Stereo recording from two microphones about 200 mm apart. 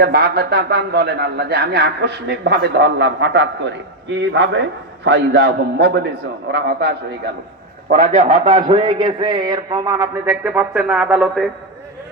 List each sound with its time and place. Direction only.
0.0 s a man's voice: 55° right (ahead or behind)
8.3 s a man's voice: 30° right (ahead or behind); by 11.4 s 5° right (ahead or behind)